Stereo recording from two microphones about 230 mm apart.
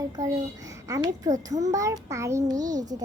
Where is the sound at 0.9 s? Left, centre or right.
Centre.